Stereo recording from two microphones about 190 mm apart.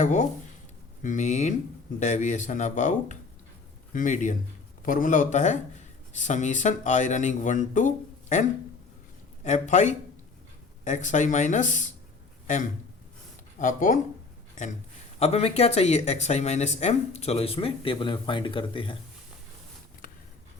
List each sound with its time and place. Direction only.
0.0 s speech: 40° left (ahead or behind)
13.6 s speech: 45° left (ahead or behind)
15.2 s speech: 35° left (ahead or behind)